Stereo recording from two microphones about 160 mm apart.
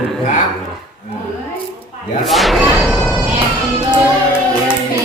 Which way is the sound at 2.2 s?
Centre (ahead or behind).